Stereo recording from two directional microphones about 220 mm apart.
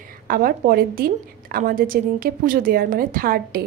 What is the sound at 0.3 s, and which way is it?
A woman's voice, 40° right (ahead or behind).